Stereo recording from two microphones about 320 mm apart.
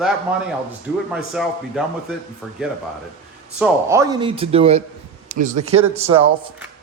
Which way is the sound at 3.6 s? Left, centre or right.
Centre.